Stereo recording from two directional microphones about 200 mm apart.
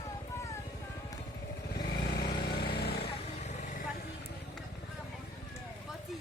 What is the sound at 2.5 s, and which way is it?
Vehicle, 50° left (ahead or behind).